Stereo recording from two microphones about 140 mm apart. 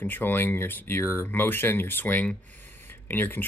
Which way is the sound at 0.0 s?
15° left (ahead or behind).